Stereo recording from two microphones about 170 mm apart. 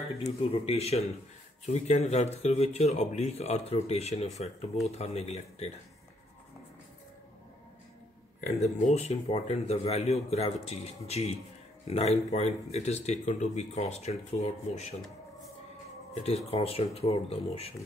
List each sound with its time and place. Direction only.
0.2 s speech: 35° left (ahead or behind)
8.5 s speech: 40° left (ahead or behind)
16.2 s speech: 35° left (ahead or behind)